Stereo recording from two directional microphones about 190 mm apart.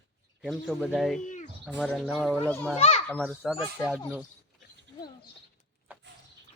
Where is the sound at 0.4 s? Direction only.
Centre (ahead or behind).